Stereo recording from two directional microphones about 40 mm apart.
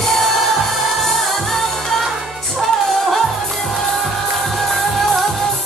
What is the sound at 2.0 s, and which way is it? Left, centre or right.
Music, centre.